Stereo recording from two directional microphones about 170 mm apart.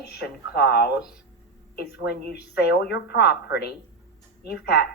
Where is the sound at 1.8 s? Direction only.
70° left (ahead or behind).